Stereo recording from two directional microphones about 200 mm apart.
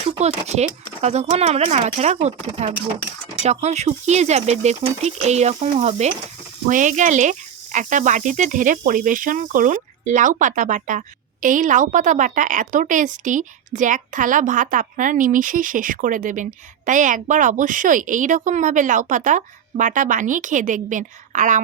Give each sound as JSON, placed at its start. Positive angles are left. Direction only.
{"t": 0.0, "sound": "a woman's voice", "side_deg": -35}